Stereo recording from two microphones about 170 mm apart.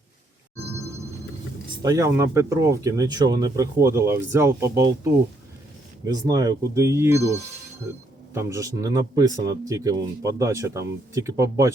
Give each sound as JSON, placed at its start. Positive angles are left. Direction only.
{"t": 1.8, "sound": "speech", "side_deg": -20}